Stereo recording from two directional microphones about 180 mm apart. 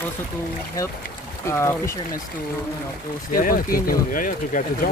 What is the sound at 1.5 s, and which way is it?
Speech, 15° left (ahead or behind).